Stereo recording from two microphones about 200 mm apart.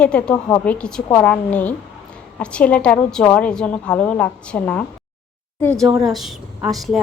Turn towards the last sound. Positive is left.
turn(degrees=0)  # may be behind; listen again after turning